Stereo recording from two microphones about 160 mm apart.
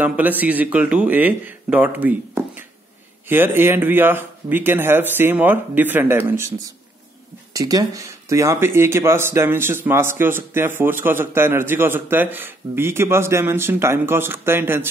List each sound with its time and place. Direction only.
0.0 s speech: 10° right (ahead or behind)
7.5 s speech: 20° right (ahead or behind)